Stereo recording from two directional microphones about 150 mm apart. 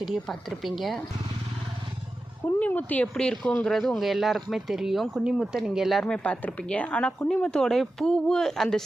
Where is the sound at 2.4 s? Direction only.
10° left (ahead or behind).